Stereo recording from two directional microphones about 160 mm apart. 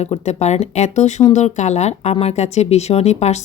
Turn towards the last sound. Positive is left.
turn(degrees=45)  # may be behind; listen again after turning